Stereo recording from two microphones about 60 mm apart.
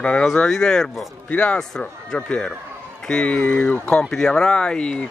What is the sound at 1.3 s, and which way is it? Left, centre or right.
Speech, left.